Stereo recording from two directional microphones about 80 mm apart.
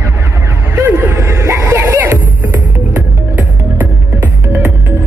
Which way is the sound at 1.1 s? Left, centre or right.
Right.